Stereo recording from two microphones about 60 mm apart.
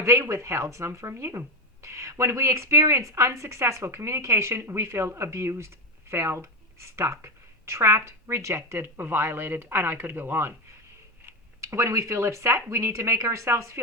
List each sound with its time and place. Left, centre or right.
0.0 s speech: right
11.6 s speech: right